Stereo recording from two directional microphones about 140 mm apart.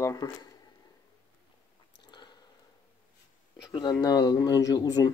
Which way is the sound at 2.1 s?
30° left (ahead or behind).